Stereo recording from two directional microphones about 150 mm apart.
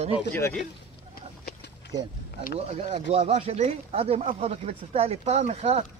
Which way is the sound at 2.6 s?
45° right (ahead or behind).